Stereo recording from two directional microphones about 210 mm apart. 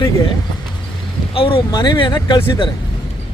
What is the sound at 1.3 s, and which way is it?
Speech, 25° left (ahead or behind).